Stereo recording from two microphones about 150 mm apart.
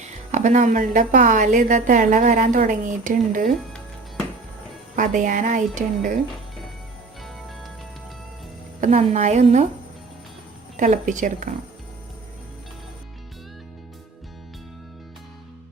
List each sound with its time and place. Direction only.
0.3 s a woman's voice: 55° right (ahead or behind)
4.9 s a woman's voice: 60° right (ahead or behind)
7.2 s music: centre (ahead or behind)
8.8 s a woman's voice: 45° right (ahead or behind)
10.8 s a woman's voice: 55° right (ahead or behind)